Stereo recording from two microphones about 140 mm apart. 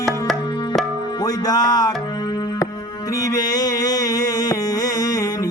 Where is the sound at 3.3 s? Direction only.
25° left (ahead or behind).